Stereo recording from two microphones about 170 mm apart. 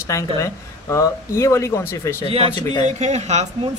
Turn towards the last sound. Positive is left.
turn(degrees=-40)  # may be behind; listen again after turning